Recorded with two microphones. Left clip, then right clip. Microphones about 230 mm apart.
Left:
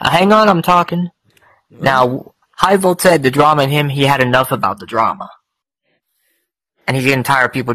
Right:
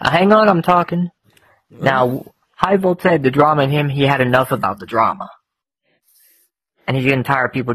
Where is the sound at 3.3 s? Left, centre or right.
Left; by 5.4 s centre.